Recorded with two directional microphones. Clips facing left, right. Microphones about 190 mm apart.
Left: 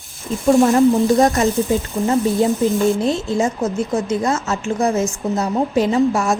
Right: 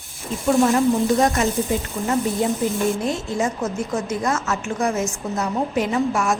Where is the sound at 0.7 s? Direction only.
35° left (ahead or behind).